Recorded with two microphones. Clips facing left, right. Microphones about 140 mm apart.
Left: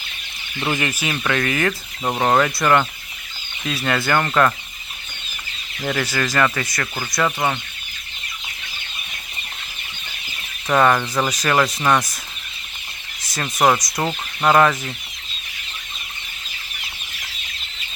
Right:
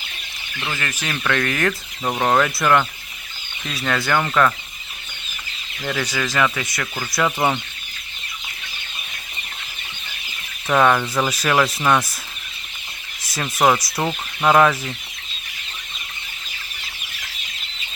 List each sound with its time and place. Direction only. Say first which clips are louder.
0.6 s speech: left 5 dB; 15° left (ahead or behind)
5.8 s speech: left 2 dB; 5° left (ahead or behind)
6.7 s speech: left 1 dB; 10° left (ahead or behind)
7.1 s speech: right 1 dB; 5° right (ahead or behind)
10.7 s speech: even; centre (ahead or behind)
13.2 s speech: even; centre (ahead or behind)